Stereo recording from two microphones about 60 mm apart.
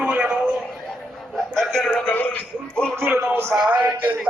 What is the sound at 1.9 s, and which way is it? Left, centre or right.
Speech, left.